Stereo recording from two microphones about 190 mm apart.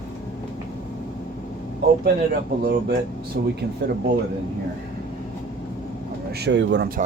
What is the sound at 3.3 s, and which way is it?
Speech, 55° right (ahead or behind).